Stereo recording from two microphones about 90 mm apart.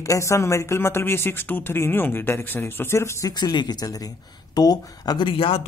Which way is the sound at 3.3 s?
50° left (ahead or behind).